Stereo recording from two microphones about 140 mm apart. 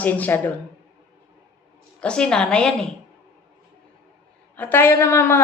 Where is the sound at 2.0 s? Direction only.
5° left (ahead or behind).